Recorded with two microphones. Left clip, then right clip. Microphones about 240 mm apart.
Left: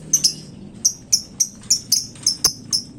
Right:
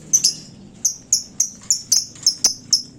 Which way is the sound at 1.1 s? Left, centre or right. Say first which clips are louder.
Left 1 dB; centre.